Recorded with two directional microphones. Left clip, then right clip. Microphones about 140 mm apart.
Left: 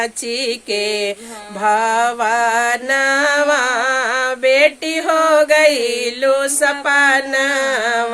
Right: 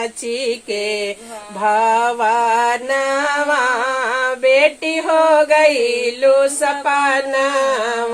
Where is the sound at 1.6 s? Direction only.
20° left (ahead or behind).